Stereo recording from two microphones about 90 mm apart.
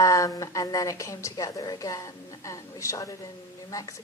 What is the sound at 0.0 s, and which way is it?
A woman's voice, 35° left (ahead or behind).